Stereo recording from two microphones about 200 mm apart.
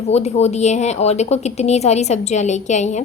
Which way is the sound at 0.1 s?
35° left (ahead or behind).